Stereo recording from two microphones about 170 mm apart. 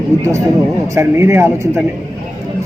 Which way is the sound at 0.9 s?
15° right (ahead or behind).